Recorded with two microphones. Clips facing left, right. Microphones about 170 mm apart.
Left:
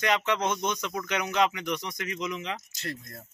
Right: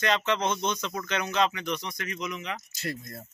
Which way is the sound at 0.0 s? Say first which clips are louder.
Even; 10° left (ahead or behind).